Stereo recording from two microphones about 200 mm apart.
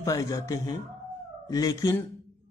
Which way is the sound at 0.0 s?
15° left (ahead or behind).